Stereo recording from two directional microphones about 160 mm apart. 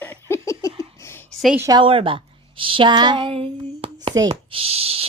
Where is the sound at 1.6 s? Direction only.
25° right (ahead or behind).